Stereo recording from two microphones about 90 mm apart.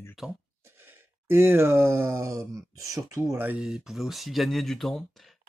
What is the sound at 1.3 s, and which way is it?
Speech, 25° right (ahead or behind).